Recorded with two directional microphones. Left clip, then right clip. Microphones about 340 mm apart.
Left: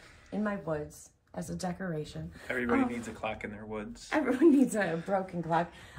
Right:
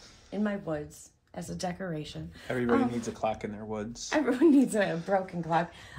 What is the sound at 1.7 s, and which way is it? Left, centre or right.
Speech, centre.